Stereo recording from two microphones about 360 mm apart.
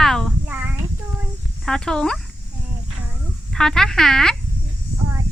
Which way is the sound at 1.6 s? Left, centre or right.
Centre.